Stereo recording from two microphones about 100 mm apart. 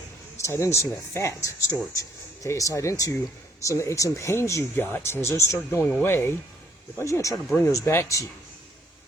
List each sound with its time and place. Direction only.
0.3 s speech: 30° left (ahead or behind)